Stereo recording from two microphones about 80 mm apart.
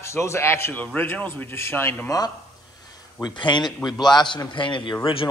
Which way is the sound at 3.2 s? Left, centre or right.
Left.